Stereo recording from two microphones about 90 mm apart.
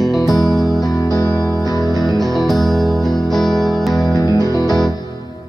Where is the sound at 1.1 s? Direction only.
45° left (ahead or behind).